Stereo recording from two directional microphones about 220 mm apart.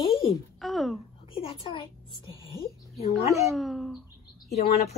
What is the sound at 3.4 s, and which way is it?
Bird, centre (ahead or behind).